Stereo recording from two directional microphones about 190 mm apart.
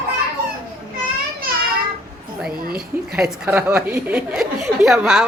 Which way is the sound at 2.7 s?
5° right (ahead or behind).